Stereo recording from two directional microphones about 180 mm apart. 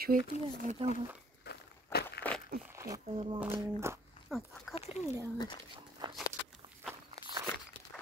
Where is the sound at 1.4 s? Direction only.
65° left (ahead or behind).